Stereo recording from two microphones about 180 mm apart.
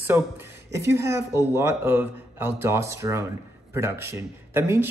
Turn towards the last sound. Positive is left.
turn(degrees=-15)  # may be behind; listen again after turning